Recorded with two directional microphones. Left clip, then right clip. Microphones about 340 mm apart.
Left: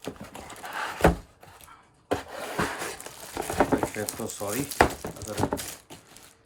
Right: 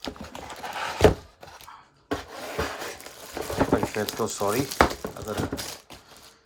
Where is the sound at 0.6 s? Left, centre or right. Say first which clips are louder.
Right 3 dB; right.